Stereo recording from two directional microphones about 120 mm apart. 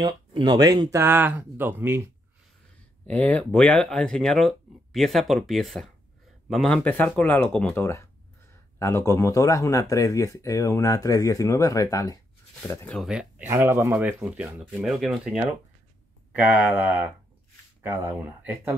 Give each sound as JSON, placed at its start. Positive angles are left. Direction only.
{"t": 0.0, "sound": "speech", "side_deg": -35}
{"t": 0.9, "sound": "speech", "side_deg": -20}
{"t": 3.1, "sound": "speech", "side_deg": 10}
{"t": 7.8, "sound": "speech", "side_deg": 20}
{"t": 13.0, "sound": "speech", "side_deg": -5}
{"t": 13.5, "sound": "speech", "side_deg": -20}
{"t": 13.9, "sound": "speech", "side_deg": -10}
{"t": 16.3, "sound": "speech", "side_deg": -10}